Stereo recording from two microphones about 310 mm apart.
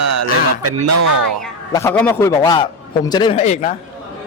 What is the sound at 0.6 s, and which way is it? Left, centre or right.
Speech, right.